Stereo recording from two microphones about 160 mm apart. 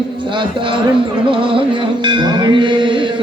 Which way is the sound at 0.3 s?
30° right (ahead or behind).